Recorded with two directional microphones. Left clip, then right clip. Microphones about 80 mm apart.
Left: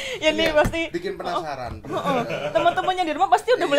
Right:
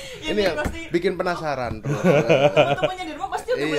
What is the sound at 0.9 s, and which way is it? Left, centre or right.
Speech, right.